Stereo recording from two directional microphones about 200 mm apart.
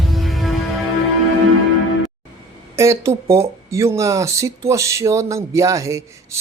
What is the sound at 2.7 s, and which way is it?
Speech, 15° right (ahead or behind).